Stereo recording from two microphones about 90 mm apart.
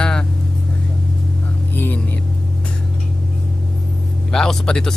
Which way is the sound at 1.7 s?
20° left (ahead or behind).